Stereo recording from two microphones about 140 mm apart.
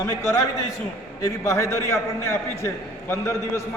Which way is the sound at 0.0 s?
20° left (ahead or behind).